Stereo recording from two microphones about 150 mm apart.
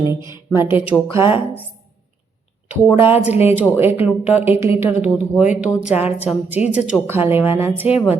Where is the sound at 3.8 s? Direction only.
15° right (ahead or behind).